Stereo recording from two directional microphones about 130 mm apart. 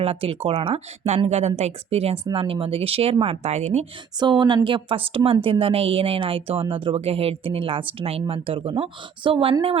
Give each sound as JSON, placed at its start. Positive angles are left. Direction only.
{"t": 0.0, "sound": "a woman's voice", "side_deg": -45}
{"t": 4.2, "sound": "a woman's voice", "side_deg": -35}